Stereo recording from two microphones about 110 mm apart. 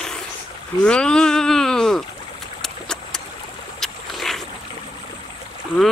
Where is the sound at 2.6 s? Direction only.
5° left (ahead or behind).